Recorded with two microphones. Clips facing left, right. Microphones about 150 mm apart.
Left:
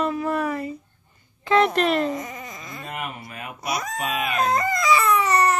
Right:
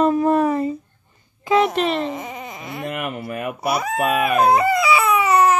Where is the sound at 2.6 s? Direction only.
75° right (ahead or behind).